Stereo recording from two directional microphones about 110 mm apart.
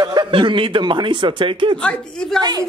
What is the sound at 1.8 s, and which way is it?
Speech, 10° left (ahead or behind).